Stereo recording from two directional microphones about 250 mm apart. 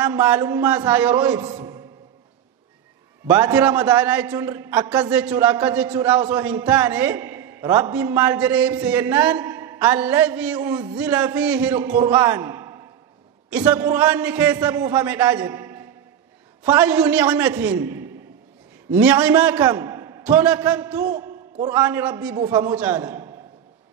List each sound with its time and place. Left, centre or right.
0.0 s a man's voice: centre
3.3 s a man's voice: centre
19.6 s a sound: centre
20.6 s a man's voice: centre
22.8 s a man's voice: centre